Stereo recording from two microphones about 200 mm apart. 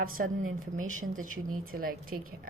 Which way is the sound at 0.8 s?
90° right.